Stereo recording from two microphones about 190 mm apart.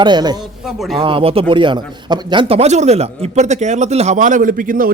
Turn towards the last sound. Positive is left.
turn(degrees=-45)  # may be behind; listen again after turning